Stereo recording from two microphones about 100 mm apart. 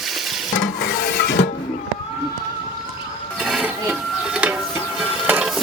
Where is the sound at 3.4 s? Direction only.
5° right (ahead or behind).